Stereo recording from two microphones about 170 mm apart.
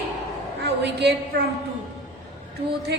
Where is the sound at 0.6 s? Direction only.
80° right.